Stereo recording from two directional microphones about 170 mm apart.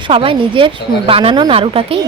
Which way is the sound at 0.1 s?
30° right (ahead or behind).